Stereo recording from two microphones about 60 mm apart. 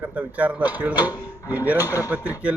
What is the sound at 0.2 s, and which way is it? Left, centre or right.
Speech, right.